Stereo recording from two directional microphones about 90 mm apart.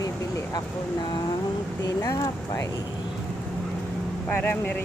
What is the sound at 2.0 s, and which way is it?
Speech, 40° left (ahead or behind).